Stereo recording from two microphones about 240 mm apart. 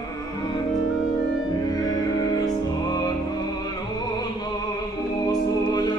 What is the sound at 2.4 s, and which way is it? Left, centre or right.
Music, centre.